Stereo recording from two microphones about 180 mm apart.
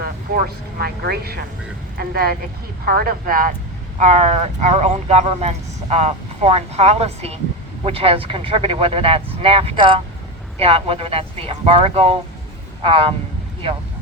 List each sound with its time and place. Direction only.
0.0 s speech: 55° right (ahead or behind); by 13.1 s 30° right (ahead or behind)